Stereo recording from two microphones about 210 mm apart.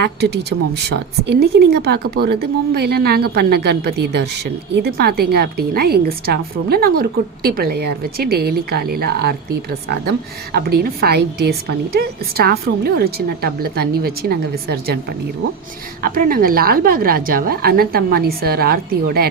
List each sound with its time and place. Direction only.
0.9 s a woman's voice: 50° right (ahead or behind)
16.0 s a woman's voice: 40° right (ahead or behind)